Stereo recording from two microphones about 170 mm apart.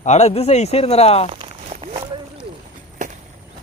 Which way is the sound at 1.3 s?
35° right (ahead or behind).